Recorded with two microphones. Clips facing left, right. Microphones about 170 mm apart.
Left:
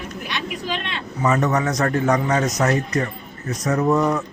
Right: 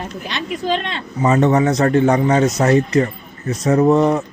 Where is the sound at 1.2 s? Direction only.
25° right (ahead or behind).